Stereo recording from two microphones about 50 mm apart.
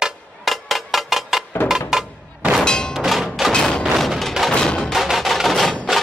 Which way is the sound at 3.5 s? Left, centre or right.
Centre.